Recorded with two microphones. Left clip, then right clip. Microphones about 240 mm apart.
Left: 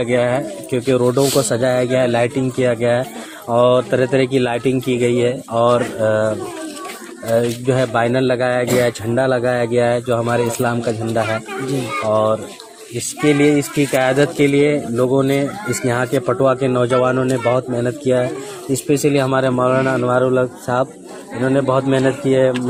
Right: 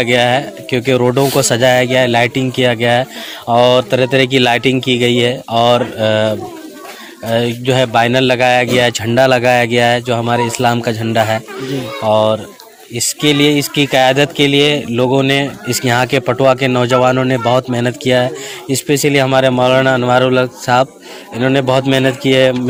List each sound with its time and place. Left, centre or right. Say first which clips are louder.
0.0 s a man's voice: right 5 dB; right
7.3 s a man's voice: right 3 dB; right